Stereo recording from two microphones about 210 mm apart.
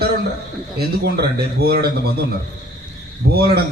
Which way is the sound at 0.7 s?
50° right (ahead or behind).